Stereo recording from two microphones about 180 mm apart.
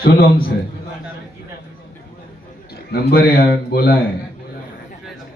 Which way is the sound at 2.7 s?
60° left (ahead or behind).